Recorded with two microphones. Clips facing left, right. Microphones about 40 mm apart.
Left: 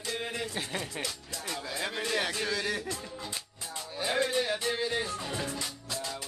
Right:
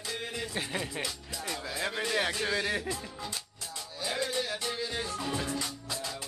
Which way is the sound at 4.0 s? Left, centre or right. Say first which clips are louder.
Left 4 dB; left.